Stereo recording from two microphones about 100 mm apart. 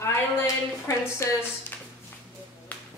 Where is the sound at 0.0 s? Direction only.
30° left (ahead or behind).